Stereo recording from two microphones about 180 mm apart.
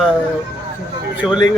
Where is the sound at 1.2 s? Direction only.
Centre (ahead or behind).